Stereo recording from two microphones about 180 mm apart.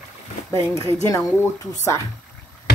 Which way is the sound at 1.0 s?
20° left (ahead or behind).